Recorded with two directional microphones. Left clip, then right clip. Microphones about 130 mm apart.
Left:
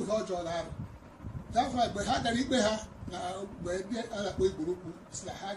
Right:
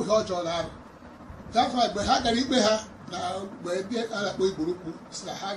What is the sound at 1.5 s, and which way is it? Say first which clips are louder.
A man's voice: right 5 dB; 5° left (ahead or behind).